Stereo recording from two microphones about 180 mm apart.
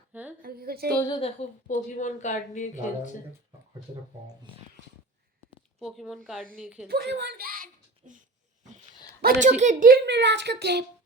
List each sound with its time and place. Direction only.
0.1 s a sound: 10° right (ahead or behind)
0.4 s a woman's voice: 55° right (ahead or behind)
1.0 s a woman's voice: 30° left (ahead or behind)
5.8 s speech: centre (ahead or behind)
6.8 s a sound: 65° right (ahead or behind); by 8.2 s 50° right (ahead or behind)
9.2 s speech: 40° right (ahead or behind)
10.1 s speech: 75° right (ahead or behind)